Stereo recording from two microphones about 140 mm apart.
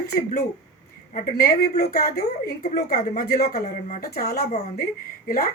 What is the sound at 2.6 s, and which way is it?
A woman's voice, 60° left (ahead or behind).